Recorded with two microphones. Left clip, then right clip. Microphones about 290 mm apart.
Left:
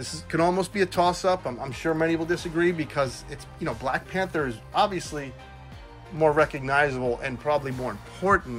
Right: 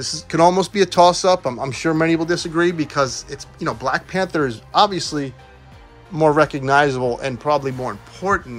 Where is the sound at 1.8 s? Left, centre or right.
Right.